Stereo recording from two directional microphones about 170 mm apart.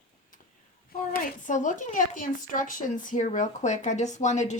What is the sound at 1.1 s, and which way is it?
Speech, 50° left (ahead or behind).